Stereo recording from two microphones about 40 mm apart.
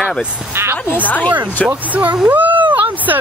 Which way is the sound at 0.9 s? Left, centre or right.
Left.